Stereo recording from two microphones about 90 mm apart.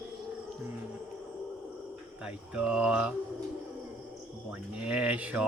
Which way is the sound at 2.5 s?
10° right (ahead or behind).